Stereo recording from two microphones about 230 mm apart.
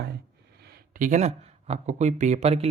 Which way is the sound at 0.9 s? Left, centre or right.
Right.